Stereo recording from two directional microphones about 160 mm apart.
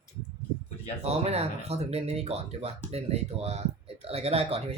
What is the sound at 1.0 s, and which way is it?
Speech, 40° right (ahead or behind).